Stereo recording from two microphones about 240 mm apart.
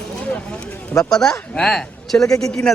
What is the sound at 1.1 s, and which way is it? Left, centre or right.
Speech, centre.